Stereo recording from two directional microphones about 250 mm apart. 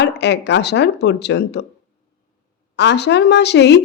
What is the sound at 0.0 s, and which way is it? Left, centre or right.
A woman's voice, left.